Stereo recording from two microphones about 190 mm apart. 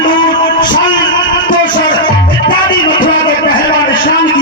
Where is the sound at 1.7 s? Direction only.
25° left (ahead or behind).